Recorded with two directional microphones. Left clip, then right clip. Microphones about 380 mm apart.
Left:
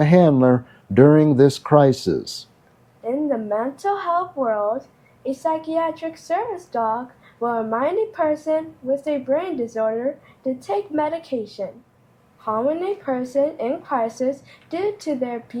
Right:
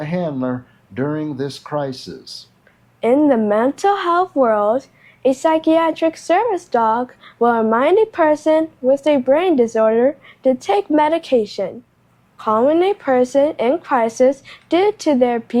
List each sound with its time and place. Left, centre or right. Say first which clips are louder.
0.0 s speech: left 7 dB; left
3.0 s a woman's voice: right 9 dB; right